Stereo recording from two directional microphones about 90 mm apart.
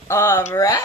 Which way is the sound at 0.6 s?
40° left (ahead or behind).